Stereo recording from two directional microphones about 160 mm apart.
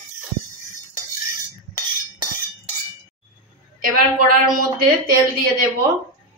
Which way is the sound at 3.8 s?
60° right (ahead or behind).